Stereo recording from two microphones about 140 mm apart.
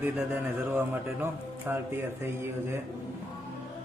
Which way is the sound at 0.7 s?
15° right (ahead or behind).